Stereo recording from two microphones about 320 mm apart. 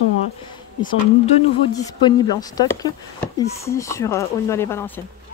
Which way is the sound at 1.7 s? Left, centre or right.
Centre.